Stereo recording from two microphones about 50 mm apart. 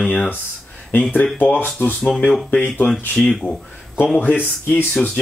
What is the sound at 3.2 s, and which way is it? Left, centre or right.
Speech, centre.